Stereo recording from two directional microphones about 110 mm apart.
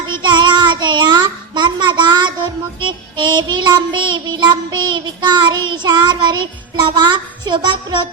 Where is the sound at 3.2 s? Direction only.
40° right (ahead or behind).